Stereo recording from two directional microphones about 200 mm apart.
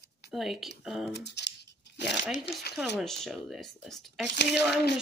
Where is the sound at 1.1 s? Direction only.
55° left (ahead or behind).